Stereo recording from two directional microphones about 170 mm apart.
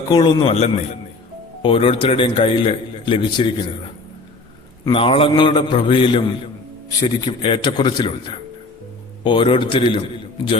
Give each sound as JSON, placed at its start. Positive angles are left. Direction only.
{"t": 0.1, "sound": "a man's voice", "side_deg": 25}
{"t": 1.6, "sound": "a man's voice", "side_deg": 30}
{"t": 4.9, "sound": "a man's voice", "side_deg": 30}